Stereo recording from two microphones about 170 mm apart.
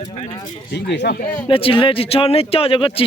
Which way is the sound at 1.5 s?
30° left (ahead or behind).